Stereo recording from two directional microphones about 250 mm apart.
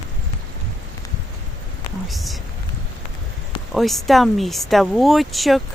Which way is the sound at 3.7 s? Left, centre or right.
Centre.